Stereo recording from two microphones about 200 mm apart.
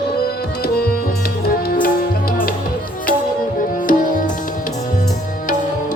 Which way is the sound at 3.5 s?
40° left (ahead or behind).